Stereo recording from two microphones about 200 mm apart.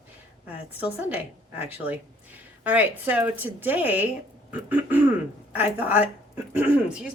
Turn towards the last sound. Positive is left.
turn(degrees=-10)  # may be behind; listen again after turning